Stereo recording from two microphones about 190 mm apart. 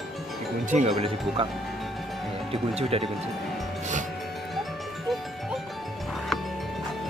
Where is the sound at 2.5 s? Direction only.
30° right (ahead or behind).